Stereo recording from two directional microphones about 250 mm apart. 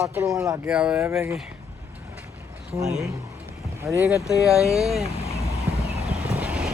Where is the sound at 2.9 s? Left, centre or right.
Centre.